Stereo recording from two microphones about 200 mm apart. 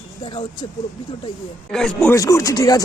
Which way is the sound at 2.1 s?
15° left (ahead or behind).